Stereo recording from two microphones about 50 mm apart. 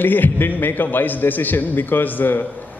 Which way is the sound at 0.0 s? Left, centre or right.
Left.